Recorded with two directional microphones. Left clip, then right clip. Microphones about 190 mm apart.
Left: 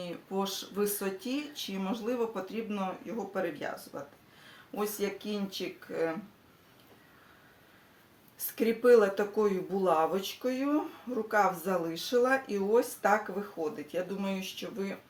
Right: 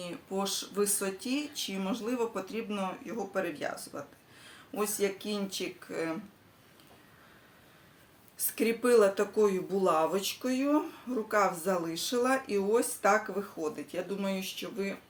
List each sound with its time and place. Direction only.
0.0 s speech: 15° right (ahead or behind)
8.4 s speech: 15° right (ahead or behind)